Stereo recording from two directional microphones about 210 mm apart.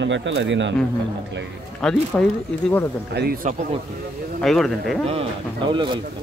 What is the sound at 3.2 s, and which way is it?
Speech, 45° right (ahead or behind).